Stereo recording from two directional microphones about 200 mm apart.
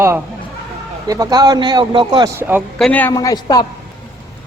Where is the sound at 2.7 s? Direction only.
5° left (ahead or behind).